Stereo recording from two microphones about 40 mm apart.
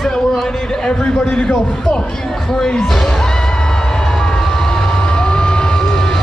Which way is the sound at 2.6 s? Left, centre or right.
Centre.